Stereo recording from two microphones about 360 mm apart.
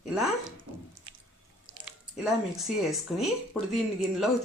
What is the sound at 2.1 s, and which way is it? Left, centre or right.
A woman's voice, centre.